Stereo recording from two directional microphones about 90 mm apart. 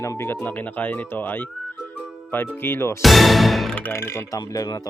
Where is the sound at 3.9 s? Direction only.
30° left (ahead or behind).